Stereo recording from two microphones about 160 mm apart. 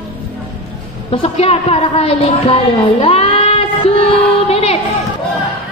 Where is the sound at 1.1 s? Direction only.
35° left (ahead or behind).